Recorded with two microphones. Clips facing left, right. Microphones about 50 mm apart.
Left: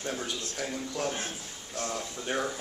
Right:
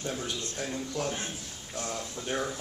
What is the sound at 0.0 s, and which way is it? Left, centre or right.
Speech, centre.